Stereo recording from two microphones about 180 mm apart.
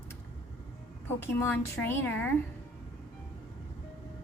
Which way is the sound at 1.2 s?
15° left (ahead or behind).